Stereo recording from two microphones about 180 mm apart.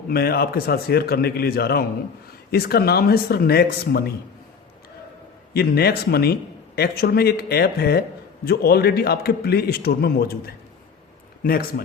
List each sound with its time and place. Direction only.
0.1 s a man's voice: 60° left (ahead or behind)
5.5 s a man's voice: 60° left (ahead or behind)